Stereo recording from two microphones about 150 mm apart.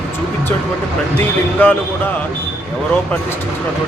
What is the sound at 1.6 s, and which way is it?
Speech, 10° left (ahead or behind).